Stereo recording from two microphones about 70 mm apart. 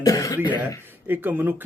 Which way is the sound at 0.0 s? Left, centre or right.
Left.